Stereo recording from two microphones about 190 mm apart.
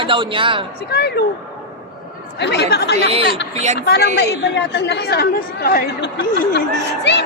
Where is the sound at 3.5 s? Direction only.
35° right (ahead or behind).